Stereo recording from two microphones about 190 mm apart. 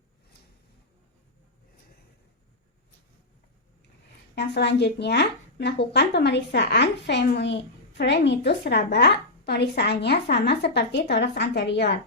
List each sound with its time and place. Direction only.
4.4 s a woman's voice: 60° left (ahead or behind)